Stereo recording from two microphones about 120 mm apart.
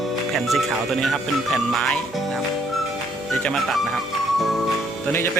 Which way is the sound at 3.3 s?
5° left (ahead or behind).